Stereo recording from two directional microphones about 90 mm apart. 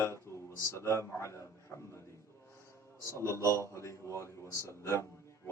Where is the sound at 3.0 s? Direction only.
30° left (ahead or behind).